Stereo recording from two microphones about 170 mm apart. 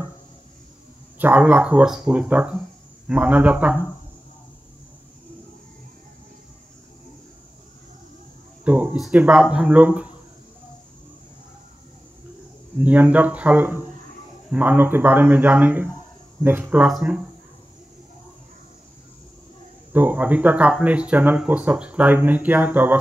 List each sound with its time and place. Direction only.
1.1 s speech: 10° right (ahead or behind)
8.6 s speech: 5° right (ahead or behind)
12.8 s speech: 10° right (ahead or behind)
19.9 s speech: 10° right (ahead or behind)